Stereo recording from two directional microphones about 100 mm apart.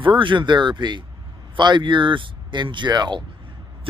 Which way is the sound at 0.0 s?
55° right (ahead or behind).